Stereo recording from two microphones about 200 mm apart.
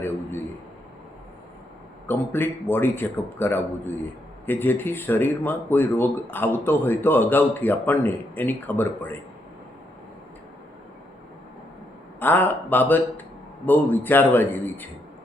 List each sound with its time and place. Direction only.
2.0 s speech: 10° left (ahead or behind)
12.2 s speech: 10° left (ahead or behind)